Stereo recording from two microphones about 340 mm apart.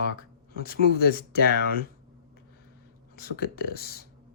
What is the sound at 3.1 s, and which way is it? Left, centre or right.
Speech, left.